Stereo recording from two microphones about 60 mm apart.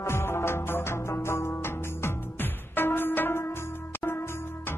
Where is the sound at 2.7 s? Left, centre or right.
Left.